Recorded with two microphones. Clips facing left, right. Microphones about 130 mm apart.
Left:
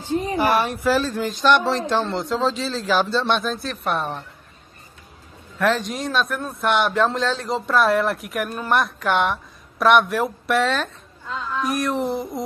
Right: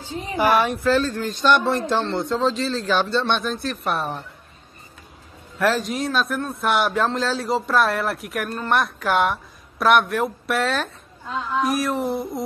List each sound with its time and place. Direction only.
0.0 s a sound: 50° left (ahead or behind)
0.8 s a man's voice: 10° left (ahead or behind)
5.6 s a man's voice: centre (ahead or behind)